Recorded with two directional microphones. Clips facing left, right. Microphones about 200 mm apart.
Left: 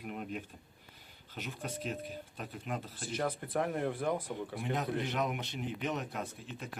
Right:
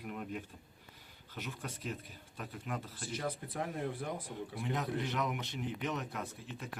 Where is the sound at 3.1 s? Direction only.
50° left (ahead or behind).